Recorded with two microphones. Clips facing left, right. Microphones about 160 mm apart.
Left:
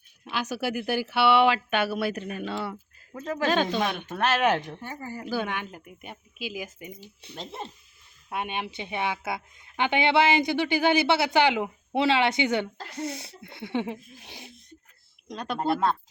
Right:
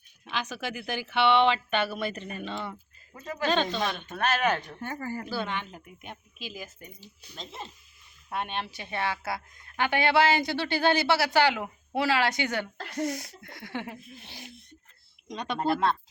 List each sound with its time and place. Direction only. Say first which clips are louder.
0.3 s speech: left 4 dB; 10° left (ahead or behind)
3.2 s speech: left 3 dB; 90° left
3.5 s speech: left 1 dB; 10° left (ahead or behind)
3.9 s speech: left 3 dB; 80° left
5.3 s speech: left 3 dB; 10° left (ahead or behind)
8.3 s a woman's voice: left 1 dB; 10° left (ahead or behind)
15.3 s a woman's voice: left 1 dB; 5° left (ahead or behind)